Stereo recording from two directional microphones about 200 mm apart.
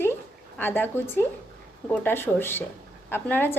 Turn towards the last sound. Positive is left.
turn(degrees=10)  # may be behind; listen again after turning